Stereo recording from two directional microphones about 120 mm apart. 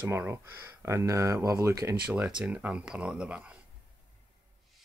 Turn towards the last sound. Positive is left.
turn(degrees=-10)  # may be behind; listen again after turning